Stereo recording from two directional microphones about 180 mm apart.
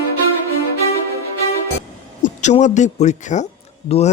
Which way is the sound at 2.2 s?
40° left (ahead or behind).